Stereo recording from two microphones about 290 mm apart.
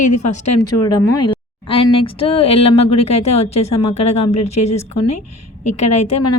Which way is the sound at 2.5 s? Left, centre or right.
Left.